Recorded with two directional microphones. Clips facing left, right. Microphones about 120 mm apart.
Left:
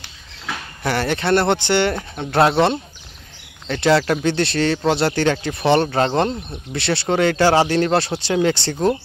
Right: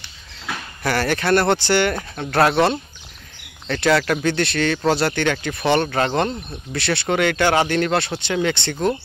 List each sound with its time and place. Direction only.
0.8 s speech: 25° left (ahead or behind)